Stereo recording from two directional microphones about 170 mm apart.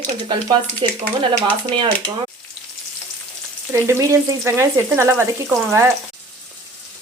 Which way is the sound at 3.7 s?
15° right (ahead or behind).